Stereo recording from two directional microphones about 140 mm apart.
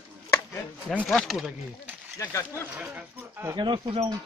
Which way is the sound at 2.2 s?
20° left (ahead or behind).